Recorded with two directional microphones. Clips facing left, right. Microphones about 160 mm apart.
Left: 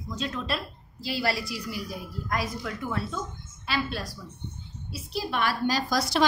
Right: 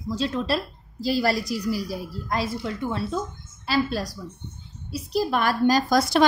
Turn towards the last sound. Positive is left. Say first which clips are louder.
# right 7 dB
turn(degrees=-45)  # may be behind; listen again after turning